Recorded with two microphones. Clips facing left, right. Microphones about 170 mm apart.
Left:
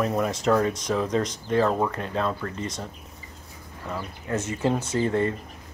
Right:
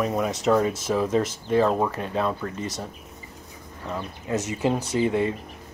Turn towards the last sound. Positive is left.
turn(degrees=-10)  # may be behind; listen again after turning